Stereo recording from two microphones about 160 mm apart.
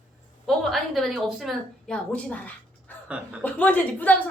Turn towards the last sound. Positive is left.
turn(degrees=10)  # may be behind; listen again after turning